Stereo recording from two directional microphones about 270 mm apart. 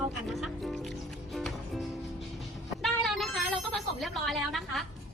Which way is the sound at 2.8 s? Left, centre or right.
Centre.